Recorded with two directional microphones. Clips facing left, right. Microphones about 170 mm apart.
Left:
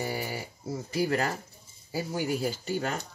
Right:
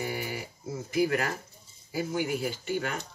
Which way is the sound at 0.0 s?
35° left (ahead or behind).